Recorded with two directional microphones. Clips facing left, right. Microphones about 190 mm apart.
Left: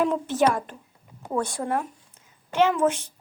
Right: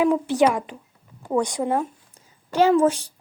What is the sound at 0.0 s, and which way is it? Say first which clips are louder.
Speech: right 3 dB; 10° right (ahead or behind).